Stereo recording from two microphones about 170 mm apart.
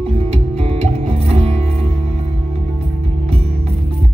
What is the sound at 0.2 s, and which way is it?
Music, 35° right (ahead or behind).